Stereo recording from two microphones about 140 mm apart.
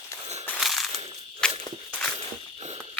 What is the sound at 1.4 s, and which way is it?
Walk, 5° left (ahead or behind).